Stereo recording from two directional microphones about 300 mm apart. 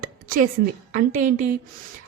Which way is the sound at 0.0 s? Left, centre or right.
Right.